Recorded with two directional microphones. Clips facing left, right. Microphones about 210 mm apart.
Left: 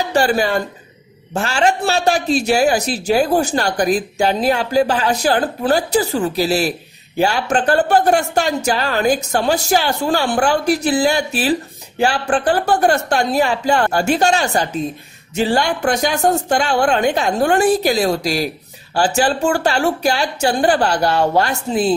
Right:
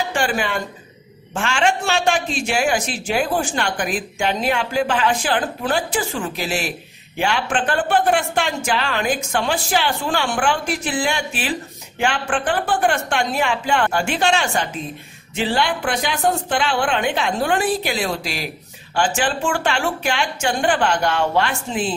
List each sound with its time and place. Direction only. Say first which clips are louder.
0.1 s a man's voice: left 6 dB; 40° left (ahead or behind)